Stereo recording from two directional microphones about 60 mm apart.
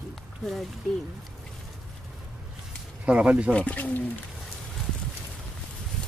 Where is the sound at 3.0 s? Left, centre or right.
Right.